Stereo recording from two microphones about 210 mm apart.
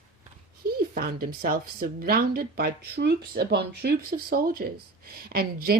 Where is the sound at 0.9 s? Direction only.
45° right (ahead or behind).